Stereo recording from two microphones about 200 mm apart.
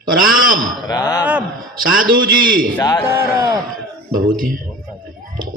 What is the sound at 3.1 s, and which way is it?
Speech, 15° right (ahead or behind).